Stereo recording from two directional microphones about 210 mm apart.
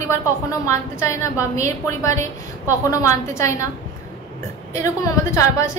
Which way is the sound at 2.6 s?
15° left (ahead or behind).